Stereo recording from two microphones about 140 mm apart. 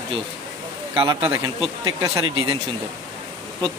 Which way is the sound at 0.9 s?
20° right (ahead or behind).